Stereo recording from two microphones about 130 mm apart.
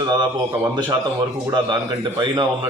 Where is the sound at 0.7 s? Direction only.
35° right (ahead or behind).